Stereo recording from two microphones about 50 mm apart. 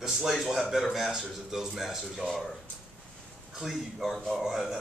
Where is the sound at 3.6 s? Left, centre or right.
Centre.